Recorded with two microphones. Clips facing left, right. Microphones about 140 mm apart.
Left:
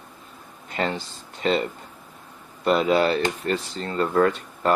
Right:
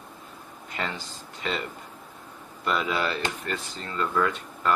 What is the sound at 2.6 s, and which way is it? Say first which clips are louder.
Speech: left 8 dB; 35° left (ahead or behind).